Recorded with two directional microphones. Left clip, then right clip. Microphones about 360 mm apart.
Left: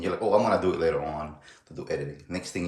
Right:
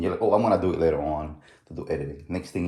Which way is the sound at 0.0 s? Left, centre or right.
Centre.